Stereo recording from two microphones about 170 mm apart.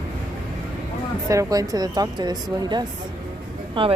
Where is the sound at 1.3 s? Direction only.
20° right (ahead or behind).